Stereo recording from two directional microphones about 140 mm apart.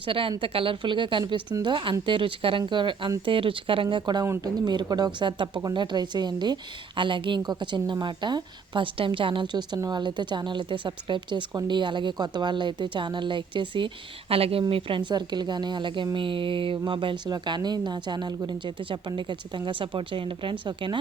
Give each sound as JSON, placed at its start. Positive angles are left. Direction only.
{"t": 0.0, "sound": "speech", "side_deg": -40}